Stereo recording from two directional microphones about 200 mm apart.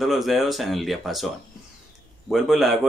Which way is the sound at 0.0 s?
Centre (ahead or behind).